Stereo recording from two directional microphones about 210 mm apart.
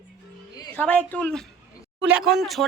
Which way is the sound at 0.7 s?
5° left (ahead or behind).